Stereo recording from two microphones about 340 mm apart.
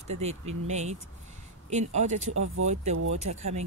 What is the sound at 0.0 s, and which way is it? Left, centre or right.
Speech, centre.